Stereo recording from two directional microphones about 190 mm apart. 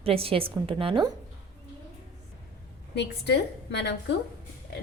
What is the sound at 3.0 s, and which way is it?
A woman's voice, 65° left (ahead or behind).